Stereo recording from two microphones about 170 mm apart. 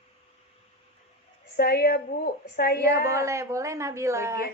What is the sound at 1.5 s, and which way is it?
A woman's voice, 65° left (ahead or behind).